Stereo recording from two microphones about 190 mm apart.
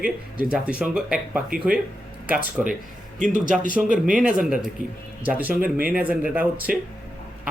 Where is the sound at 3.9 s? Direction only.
45° right (ahead or behind).